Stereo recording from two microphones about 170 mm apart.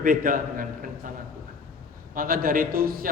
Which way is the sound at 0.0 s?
55° right (ahead or behind).